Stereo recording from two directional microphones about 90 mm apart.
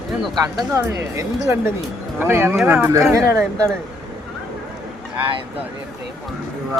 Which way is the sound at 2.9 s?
35° right (ahead or behind).